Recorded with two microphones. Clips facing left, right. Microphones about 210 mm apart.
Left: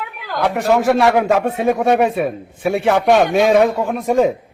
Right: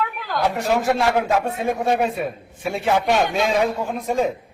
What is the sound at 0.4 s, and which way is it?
Speech, 70° left (ahead or behind).